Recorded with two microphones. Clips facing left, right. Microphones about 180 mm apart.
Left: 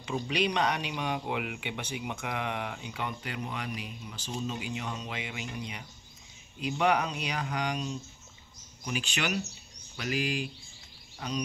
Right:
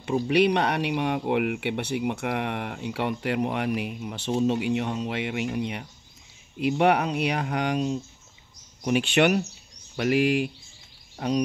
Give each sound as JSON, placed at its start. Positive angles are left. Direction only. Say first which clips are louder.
{"t": 0.0, "sound": "speech", "louder": "right 9 dB", "side_deg": -55}